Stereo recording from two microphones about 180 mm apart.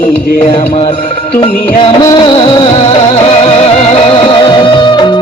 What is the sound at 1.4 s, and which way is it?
Music of bollywood, 25° left (ahead or behind).